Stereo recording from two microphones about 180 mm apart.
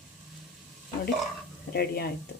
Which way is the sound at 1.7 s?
60° left (ahead or behind).